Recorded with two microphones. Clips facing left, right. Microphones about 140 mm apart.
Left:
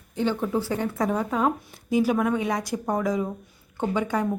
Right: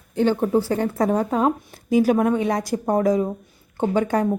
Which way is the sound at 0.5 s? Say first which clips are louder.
Right 5 dB; 40° right (ahead or behind).